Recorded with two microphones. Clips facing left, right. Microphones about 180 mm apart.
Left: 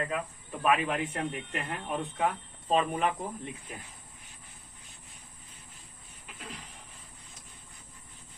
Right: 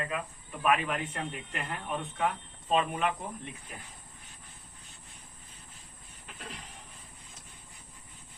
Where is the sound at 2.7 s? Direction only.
35° left (ahead or behind).